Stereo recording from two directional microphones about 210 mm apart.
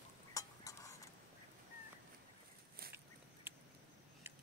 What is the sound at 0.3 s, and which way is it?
Stir, 15° left (ahead or behind).